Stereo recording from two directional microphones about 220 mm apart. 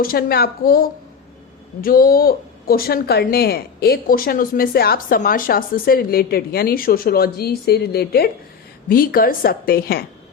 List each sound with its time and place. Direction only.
0.0 s a woman's voice: 40° left (ahead or behind)